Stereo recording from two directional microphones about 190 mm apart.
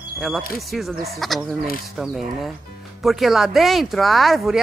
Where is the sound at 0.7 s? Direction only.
Centre (ahead or behind).